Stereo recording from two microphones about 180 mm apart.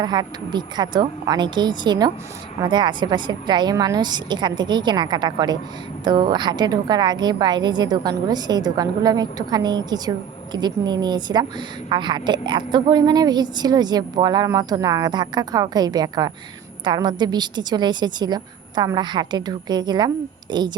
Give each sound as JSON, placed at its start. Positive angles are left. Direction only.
{"t": 0.0, "sound": "a woman's voice", "side_deg": -25}